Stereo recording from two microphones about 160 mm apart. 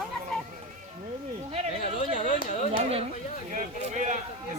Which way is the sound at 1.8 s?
55° left (ahead or behind).